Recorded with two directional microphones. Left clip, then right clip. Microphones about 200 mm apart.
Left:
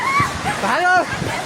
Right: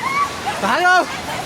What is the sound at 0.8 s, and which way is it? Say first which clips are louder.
Speech: right 2 dB; 30° right (ahead or behind).